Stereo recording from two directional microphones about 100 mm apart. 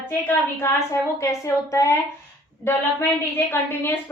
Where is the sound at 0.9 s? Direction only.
30° left (ahead or behind).